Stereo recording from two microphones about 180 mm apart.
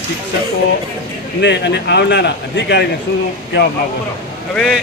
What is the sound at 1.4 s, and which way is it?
Speech, 75° left (ahead or behind).